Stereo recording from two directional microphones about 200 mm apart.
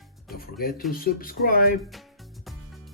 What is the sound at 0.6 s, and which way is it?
Speech, 50° left (ahead or behind).